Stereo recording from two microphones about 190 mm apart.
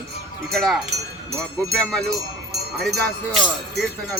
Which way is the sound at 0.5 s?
Centre (ahead or behind).